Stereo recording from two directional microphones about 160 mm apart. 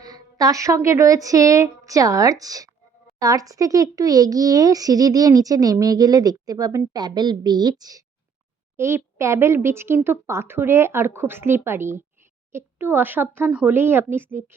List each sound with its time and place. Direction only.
0.0 s a child's voice: 25° right (ahead or behind)